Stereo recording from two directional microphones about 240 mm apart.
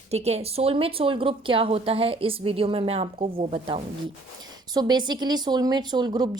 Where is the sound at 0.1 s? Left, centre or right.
Right.